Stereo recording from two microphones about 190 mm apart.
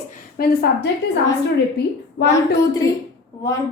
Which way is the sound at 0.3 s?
55° left (ahead or behind).